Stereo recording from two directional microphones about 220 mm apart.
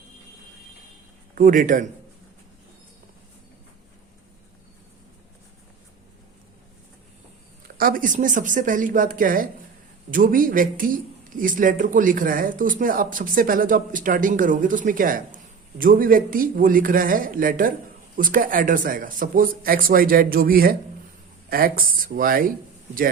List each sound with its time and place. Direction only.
1.4 s speech: 40° right (ahead or behind)
7.8 s speech: 40° right (ahead or behind)